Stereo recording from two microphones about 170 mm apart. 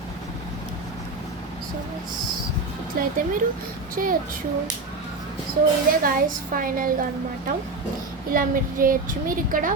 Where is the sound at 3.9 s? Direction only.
55° right (ahead or behind).